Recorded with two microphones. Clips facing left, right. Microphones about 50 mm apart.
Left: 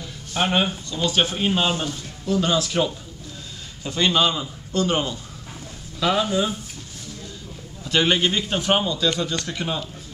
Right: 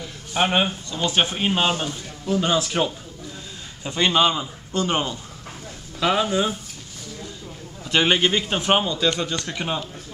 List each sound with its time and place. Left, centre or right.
0.0 s a sound: centre
1.0 s a man's voice: right
7.8 s a man's voice: centre